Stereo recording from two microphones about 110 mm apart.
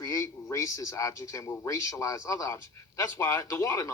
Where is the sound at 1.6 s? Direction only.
30° left (ahead or behind).